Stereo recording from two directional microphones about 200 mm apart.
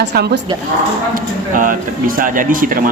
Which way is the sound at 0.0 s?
55° right (ahead or behind).